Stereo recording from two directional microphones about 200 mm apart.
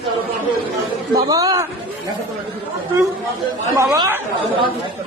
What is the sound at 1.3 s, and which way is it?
Speech, 15° right (ahead or behind).